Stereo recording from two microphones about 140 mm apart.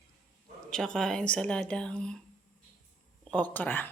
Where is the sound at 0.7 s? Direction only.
5° left (ahead or behind).